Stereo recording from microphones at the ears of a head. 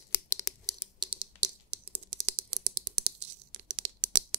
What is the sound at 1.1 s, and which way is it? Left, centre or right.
Computer keyboard, right.